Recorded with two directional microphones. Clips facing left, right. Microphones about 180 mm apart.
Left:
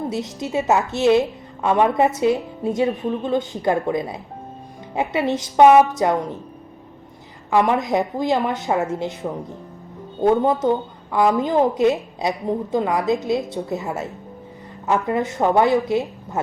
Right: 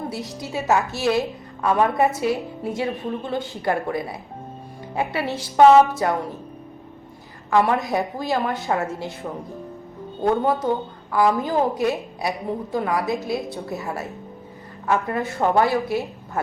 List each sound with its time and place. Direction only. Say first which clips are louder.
0.1 s a woman's voice: left 5 dB; 20° left (ahead or behind)
7.5 s a woman's voice: left 2 dB; 15° left (ahead or behind)